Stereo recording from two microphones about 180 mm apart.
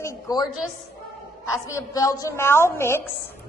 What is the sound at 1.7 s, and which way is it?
A woman's voice, 20° left (ahead or behind).